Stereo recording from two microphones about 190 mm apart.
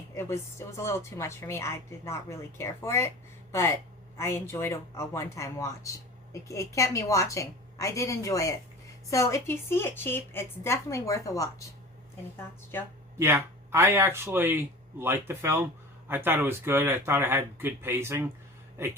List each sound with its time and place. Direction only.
0.2 s a woman's voice: 15° left (ahead or behind)
4.2 s a woman's voice: 15° left (ahead or behind)
13.1 s speech: 15° right (ahead or behind)